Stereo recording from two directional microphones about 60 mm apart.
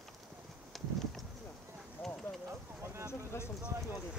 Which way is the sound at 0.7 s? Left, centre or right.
Centre.